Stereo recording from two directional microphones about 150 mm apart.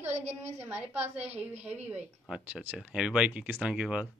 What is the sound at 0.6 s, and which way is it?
Speech, 10° right (ahead or behind).